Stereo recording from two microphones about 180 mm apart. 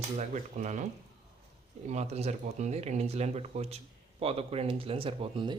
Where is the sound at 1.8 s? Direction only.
40° right (ahead or behind).